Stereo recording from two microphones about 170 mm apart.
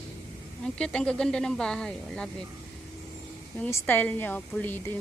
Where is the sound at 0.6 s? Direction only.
5° left (ahead or behind).